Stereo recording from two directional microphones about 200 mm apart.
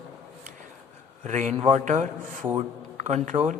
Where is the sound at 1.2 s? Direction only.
35° right (ahead or behind).